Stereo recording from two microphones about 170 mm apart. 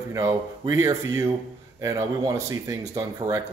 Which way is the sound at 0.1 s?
20° right (ahead or behind).